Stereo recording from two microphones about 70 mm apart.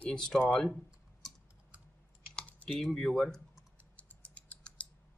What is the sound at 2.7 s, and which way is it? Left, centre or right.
Speech, centre.